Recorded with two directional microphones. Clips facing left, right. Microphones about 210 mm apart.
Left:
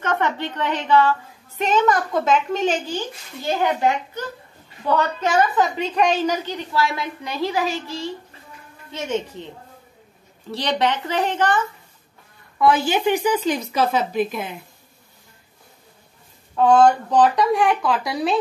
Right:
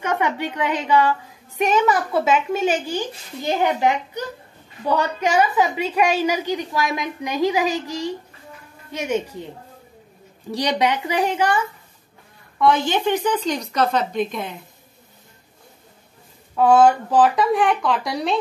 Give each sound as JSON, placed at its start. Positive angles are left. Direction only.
{"t": 0.0, "sound": "a woman's voice", "side_deg": -10}
{"t": 10.5, "sound": "a woman's voice", "side_deg": -15}
{"t": 12.5, "sound": "speech", "side_deg": 5}
{"t": 16.5, "sound": "a woman's voice", "side_deg": -5}